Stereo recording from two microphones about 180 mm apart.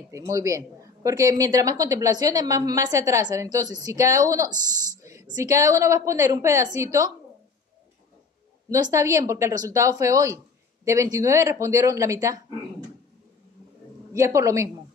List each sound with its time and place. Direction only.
0.1 s a woman's voice: 20° right (ahead or behind)
8.6 s a woman's voice: 20° right (ahead or behind)
14.1 s a woman's voice: 15° right (ahead or behind)